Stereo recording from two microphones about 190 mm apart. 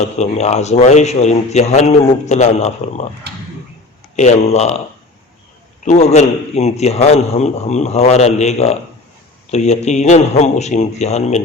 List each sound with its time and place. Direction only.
0.2 s a man's voice: 35° left (ahead or behind)
4.1 s a man's voice: 40° left (ahead or behind)
5.8 s a man's voice: 35° left (ahead or behind)